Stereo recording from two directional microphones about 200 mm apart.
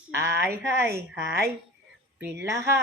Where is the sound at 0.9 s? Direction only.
55° right (ahead or behind).